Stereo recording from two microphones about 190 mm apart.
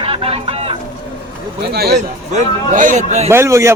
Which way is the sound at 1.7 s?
55° right (ahead or behind).